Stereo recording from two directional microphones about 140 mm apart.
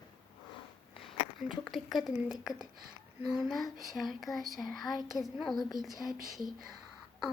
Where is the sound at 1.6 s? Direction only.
Centre (ahead or behind).